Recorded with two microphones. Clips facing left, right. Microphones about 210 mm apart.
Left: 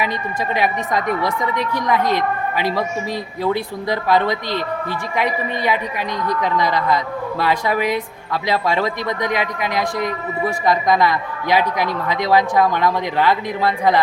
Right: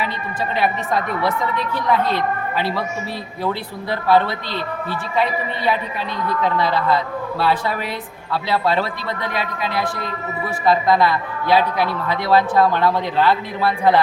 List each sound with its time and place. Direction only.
0.5 s a woman's voice: 15° left (ahead or behind)